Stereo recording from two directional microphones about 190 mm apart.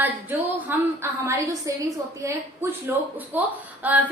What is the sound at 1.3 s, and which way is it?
A woman's voice, 15° right (ahead or behind).